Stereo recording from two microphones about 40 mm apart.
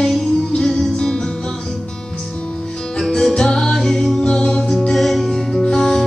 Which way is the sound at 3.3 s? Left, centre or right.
Centre.